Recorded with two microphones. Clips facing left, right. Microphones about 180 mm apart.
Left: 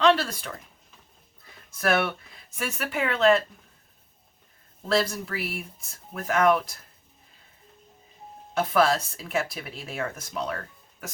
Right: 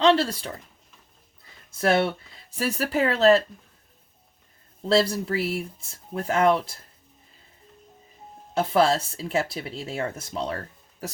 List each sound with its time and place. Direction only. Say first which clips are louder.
0.0 s speech: right 2 dB; 25° right (ahead or behind)
1.7 s speech: right 3 dB; 30° right (ahead or behind)
4.9 s speech: right 4 dB; 30° right (ahead or behind)
8.5 s speech: right 2 dB; 30° right (ahead or behind)